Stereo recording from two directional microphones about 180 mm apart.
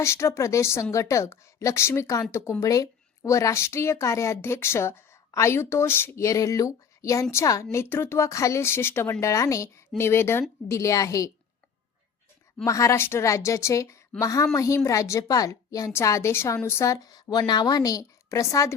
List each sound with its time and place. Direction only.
0.0 s a woman's voice: 15° left (ahead or behind)
12.6 s a woman's voice: 15° left (ahead or behind)